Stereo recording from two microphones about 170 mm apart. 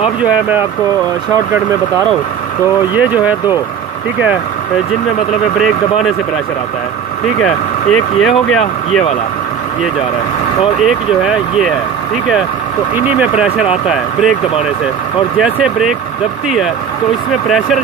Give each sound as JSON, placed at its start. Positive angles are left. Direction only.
{"t": 0.2, "sound": "speech", "side_deg": -10}
{"t": 1.3, "sound": "speech", "side_deg": -20}
{"t": 2.9, "sound": "speech", "side_deg": -10}
{"t": 5.6, "sound": "speech", "side_deg": 0}
{"t": 7.4, "sound": "speech", "side_deg": 5}
{"t": 10.8, "sound": "speech", "side_deg": -5}
{"t": 12.9, "sound": "speech", "side_deg": -10}
{"t": 15.3, "sound": "speech", "side_deg": -5}